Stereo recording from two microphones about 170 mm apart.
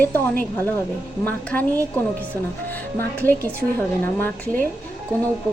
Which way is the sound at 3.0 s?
10° left (ahead or behind).